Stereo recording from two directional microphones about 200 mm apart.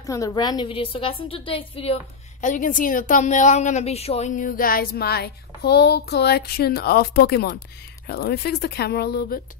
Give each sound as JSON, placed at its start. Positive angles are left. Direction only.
{"t": 0.0, "sound": "a woman's voice", "side_deg": 15}
{"t": 2.4, "sound": "a woman's voice", "side_deg": 40}